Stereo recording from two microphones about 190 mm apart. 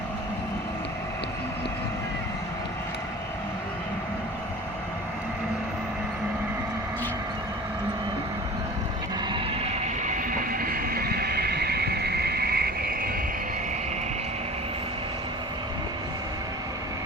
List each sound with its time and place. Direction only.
9.3 s train: 35° right (ahead or behind); by 13.1 s 50° right (ahead or behind)